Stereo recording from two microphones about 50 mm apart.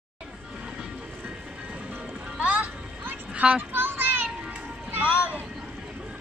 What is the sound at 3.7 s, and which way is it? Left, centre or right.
Children playing, right.